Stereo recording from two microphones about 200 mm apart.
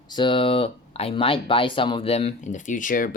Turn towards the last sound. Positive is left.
turn(degrees=40)  # may be behind; listen again after turning